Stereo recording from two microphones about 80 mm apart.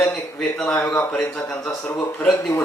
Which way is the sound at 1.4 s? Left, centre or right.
Left.